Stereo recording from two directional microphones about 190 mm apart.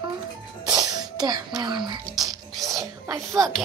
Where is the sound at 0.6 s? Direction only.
20° right (ahead or behind).